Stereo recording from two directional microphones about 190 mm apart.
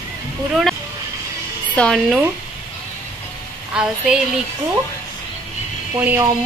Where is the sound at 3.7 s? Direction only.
5° right (ahead or behind).